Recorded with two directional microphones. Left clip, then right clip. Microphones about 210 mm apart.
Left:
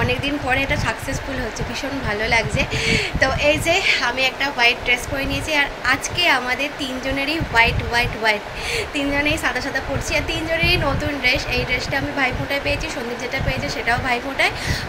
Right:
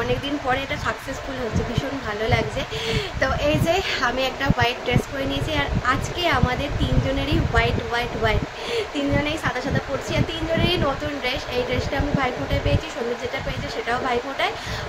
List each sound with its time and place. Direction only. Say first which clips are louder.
0.5 s speech: left 4 dB; 15° right (ahead or behind)
2.2 s a woman's voice: left 4 dB; 15° right (ahead or behind)
5.5 s speech: left 5 dB; 15° right (ahead or behind)
13.8 s speech: left 2 dB; 15° right (ahead or behind)